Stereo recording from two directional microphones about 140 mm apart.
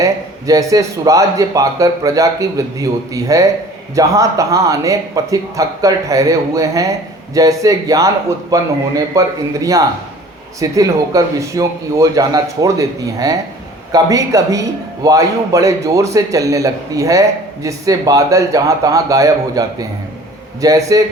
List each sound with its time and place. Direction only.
0.0 s a man's voice: 25° right (ahead or behind)